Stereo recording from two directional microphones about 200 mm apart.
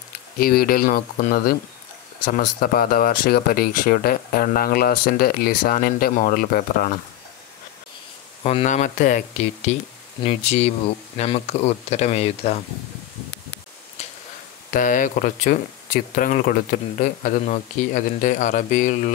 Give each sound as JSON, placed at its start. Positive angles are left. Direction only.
{"t": 0.4, "sound": "speech", "side_deg": 45}
{"t": 8.5, "sound": "speech", "side_deg": 35}
{"t": 10.2, "sound": "speech", "side_deg": 30}
{"t": 14.7, "sound": "speech", "side_deg": 40}